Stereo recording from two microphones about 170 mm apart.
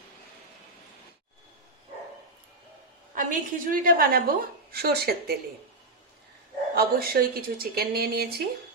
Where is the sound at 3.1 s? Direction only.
50° right (ahead or behind).